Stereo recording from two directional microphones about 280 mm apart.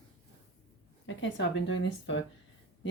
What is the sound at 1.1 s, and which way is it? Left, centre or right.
Speech, left.